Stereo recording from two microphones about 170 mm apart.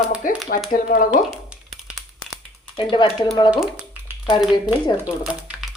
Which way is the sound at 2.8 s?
30° left (ahead or behind).